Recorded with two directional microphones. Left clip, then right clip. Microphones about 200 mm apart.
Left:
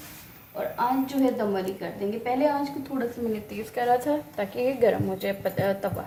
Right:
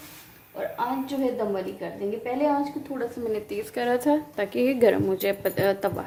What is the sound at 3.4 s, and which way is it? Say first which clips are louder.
A woman's voice: left 5 dB; 45° right (ahead or behind).